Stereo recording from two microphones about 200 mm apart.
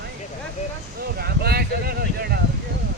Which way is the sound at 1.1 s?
50° right (ahead or behind).